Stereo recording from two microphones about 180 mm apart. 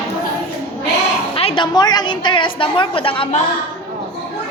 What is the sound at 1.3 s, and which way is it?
A woman's voice, 30° left (ahead or behind).